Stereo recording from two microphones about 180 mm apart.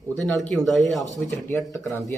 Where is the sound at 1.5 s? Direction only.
10° left (ahead or behind).